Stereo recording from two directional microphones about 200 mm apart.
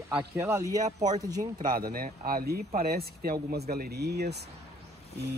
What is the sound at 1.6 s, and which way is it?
Speech, 45° right (ahead or behind).